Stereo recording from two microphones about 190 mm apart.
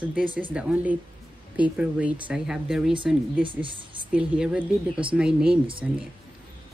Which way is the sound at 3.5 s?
25° right (ahead or behind).